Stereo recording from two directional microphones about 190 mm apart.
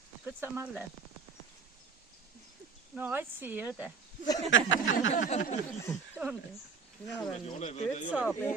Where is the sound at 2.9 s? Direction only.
10° right (ahead or behind).